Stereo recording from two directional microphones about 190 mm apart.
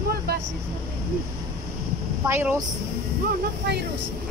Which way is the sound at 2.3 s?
10° right (ahead or behind).